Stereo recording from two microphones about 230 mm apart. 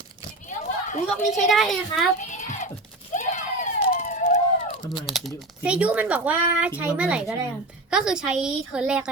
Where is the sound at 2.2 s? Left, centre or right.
Left.